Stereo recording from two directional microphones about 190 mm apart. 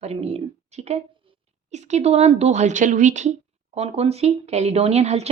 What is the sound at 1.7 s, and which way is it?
Speech, 35° right (ahead or behind).